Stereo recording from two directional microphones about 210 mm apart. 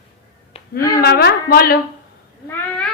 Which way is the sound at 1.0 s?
50° left (ahead or behind).